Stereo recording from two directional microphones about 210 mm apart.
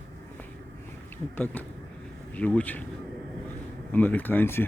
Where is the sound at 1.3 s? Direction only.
10° left (ahead or behind).